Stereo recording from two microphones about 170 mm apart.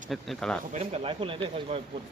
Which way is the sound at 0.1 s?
5° left (ahead or behind).